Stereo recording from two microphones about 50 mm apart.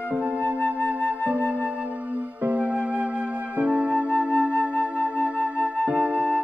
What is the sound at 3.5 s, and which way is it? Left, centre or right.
Flute, right.